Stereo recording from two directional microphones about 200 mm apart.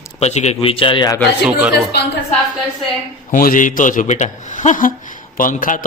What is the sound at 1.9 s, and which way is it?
Speech, 55° left (ahead or behind).